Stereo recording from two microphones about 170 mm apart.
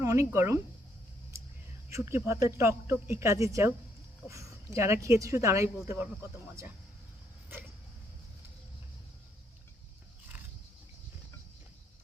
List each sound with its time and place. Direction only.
0.0 s speech: 20° right (ahead or behind)
1.9 s speech: 15° right (ahead or behind)